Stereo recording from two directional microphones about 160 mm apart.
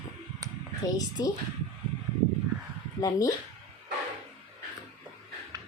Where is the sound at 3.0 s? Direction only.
20° left (ahead or behind).